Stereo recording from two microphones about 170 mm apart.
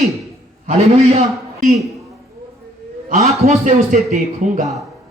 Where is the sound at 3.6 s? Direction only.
50° right (ahead or behind).